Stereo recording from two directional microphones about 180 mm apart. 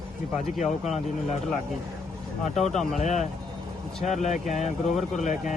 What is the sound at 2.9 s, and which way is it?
Speech, 40° left (ahead or behind).